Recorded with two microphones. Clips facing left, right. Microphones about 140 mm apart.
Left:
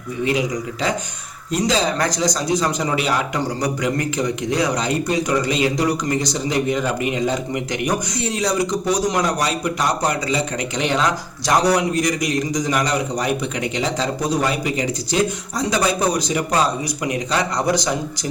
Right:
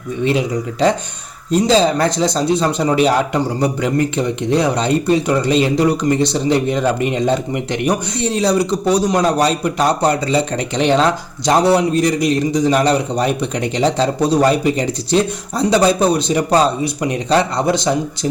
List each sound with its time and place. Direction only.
0.3 s speech: 30° right (ahead or behind)